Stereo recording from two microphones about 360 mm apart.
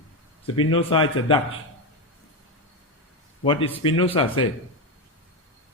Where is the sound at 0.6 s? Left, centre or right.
Centre.